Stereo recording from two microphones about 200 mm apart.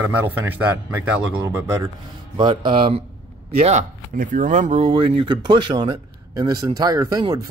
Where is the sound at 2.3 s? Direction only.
25° right (ahead or behind).